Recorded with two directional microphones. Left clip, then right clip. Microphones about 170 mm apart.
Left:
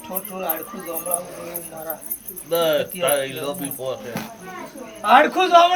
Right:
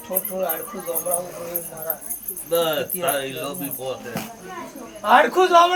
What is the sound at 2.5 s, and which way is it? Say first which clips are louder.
Speech: left 2 dB; 5° right (ahead or behind).